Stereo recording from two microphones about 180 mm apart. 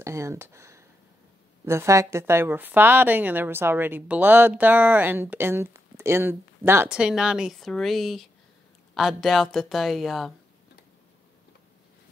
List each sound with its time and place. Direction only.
0.0 s a woman's voice: 15° right (ahead or behind); by 10.3 s centre (ahead or behind)